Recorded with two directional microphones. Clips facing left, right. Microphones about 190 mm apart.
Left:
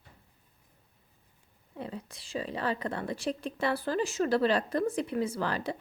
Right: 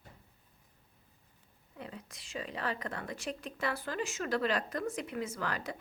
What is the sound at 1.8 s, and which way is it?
Speech, 30° left (ahead or behind).